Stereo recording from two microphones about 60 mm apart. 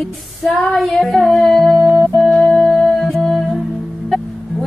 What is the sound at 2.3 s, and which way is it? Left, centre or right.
Music, centre.